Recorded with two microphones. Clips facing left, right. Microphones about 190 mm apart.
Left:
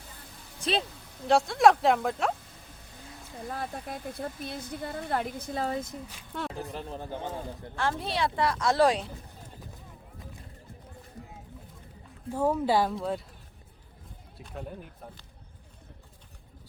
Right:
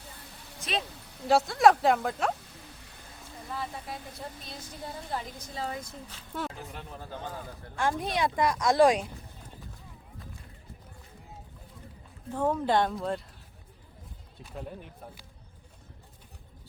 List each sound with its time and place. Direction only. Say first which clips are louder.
0.6 s speech: left 4 dB; 30° left (ahead or behind)
1.3 s speech: even; centre (ahead or behind)
3.5 s a woman's voice: left 1 dB; 50° left (ahead or behind)
5.8 s speech: left 4 dB; 15° left (ahead or behind)
6.6 s speech: left 6 dB; 30° left (ahead or behind)
7.8 s a woman's voice: right 1 dB; 15° right (ahead or behind)
12.3 s speech: left 1 dB; 10° left (ahead or behind)
14.4 s speech: even; centre (ahead or behind)